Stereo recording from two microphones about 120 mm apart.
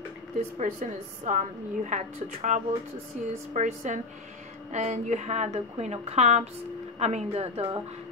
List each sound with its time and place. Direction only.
0.4 s a woman's voice: 90° right
3.5 s a woman's voice: 80° right; by 7.8 s 60° right (ahead or behind)